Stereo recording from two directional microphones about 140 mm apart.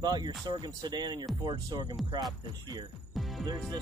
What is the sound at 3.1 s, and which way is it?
Music, centre (ahead or behind).